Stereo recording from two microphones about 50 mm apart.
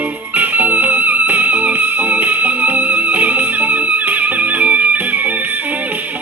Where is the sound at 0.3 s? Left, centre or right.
Right.